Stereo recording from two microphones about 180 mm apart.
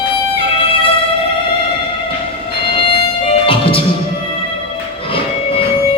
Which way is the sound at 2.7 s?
30° left (ahead or behind).